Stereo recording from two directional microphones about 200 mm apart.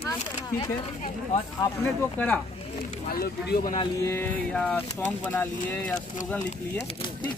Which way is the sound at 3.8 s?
15° left (ahead or behind).